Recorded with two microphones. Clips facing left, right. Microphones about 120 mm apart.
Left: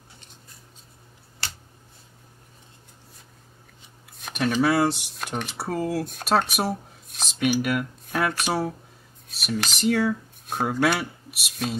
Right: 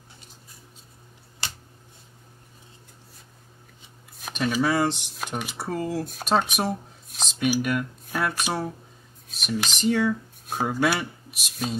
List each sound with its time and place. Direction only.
1.4 s a sound: 20° right (ahead or behind)
4.2 s speech: centre (ahead or behind)
5.6 s speech: 5° left (ahead or behind)